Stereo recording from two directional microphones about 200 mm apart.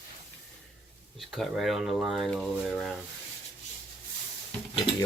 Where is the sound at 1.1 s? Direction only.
Centre (ahead or behind).